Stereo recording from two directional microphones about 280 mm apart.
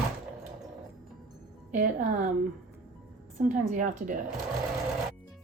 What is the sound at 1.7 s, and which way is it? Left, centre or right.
Speech, right.